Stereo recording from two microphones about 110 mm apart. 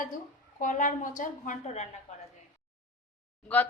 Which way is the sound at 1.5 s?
90° left.